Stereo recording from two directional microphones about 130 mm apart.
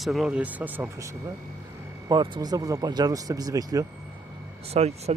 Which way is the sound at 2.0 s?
35° right (ahead or behind).